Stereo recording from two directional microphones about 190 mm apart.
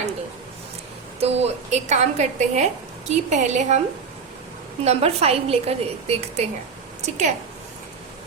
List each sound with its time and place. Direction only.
1.2 s a woman's voice: 35° right (ahead or behind)
4.8 s a woman's voice: 35° right (ahead or behind)